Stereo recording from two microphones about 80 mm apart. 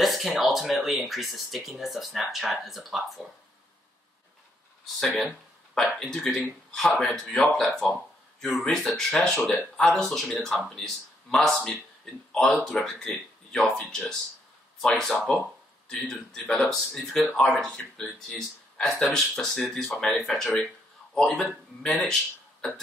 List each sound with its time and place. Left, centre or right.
0.0 s speech: centre
5.0 s speech: centre
20.4 s speech: centre
21.1 s speech: centre